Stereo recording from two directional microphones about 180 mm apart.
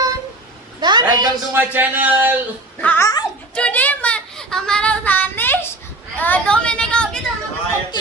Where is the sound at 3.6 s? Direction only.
5° left (ahead or behind).